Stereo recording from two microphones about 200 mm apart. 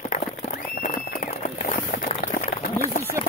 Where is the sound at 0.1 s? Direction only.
40° left (ahead or behind).